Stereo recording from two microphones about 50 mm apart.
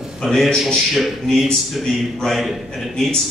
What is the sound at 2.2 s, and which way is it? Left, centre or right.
Speech, centre.